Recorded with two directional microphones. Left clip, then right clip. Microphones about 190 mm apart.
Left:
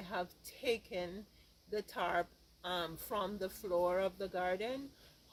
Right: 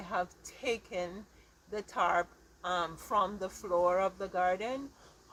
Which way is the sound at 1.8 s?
40° left (ahead or behind).